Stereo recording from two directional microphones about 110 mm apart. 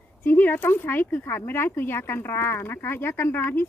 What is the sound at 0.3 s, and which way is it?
Speech, 20° left (ahead or behind).